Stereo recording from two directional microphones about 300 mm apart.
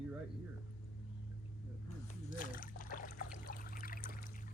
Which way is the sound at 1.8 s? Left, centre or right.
Left.